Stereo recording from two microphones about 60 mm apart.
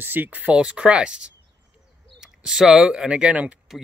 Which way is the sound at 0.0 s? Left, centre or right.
Right.